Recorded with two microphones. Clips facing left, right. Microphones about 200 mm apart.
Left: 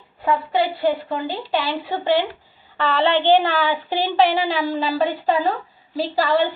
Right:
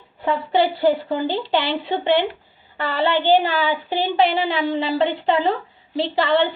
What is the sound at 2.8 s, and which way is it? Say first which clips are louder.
Speech: left 1 dB; 10° right (ahead or behind).